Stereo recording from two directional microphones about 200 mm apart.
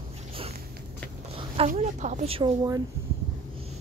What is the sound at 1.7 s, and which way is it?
Speech, 35° right (ahead or behind).